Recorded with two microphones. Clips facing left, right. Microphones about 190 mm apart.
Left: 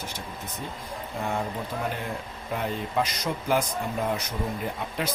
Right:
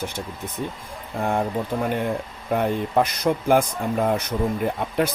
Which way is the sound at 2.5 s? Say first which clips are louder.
Right 8 dB; 55° right (ahead or behind).